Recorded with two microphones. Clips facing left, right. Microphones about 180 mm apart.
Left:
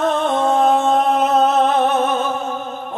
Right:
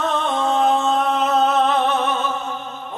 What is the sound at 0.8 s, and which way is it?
Music, 50° left (ahead or behind).